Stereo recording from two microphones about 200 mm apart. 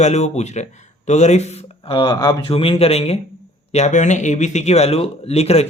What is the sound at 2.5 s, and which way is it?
Speech, 30° left (ahead or behind).